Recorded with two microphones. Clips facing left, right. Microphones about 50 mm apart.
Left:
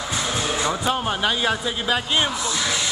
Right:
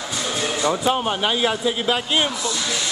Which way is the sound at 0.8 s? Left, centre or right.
Centre.